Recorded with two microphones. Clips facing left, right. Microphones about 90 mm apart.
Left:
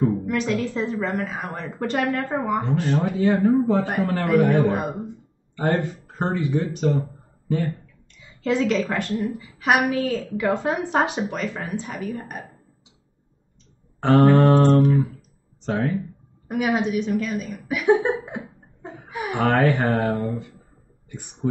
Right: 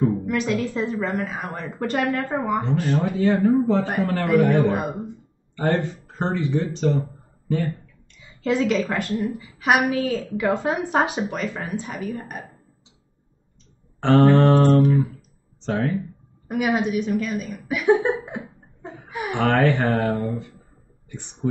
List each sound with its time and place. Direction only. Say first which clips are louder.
0.0 s a woman's voice: even; 5° right (ahead or behind)
3.2 s a man's voice: even; 10° left (ahead or behind)
6.8 s a sound: even; 10° left (ahead or behind)
8.4 s a woman's voice: even; 5° right (ahead or behind)
13.9 s a man's voice: even; 10° left (ahead or behind)
14.6 s a woman's voice: even; 5° right (ahead or behind)
15.6 s speech: even; 10° left (ahead or behind)
16.4 s a woman's voice: even; 5° right (ahead or behind)